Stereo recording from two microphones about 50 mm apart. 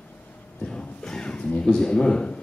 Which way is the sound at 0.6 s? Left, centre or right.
Centre.